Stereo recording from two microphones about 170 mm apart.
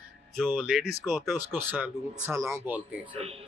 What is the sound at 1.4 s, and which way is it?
Speech, 10° right (ahead or behind).